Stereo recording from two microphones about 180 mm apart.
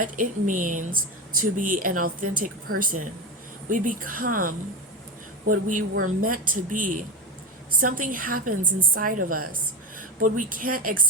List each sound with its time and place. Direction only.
0.0 s speech: 50° right (ahead or behind)
5.9 s speech: 50° right (ahead or behind)